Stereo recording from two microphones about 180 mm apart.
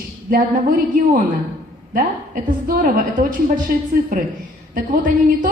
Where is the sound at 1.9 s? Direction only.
50° right (ahead or behind).